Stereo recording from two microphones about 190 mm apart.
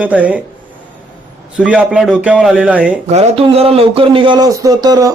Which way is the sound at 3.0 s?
35° right (ahead or behind).